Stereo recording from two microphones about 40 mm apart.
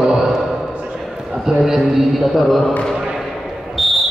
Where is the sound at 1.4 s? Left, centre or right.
Centre.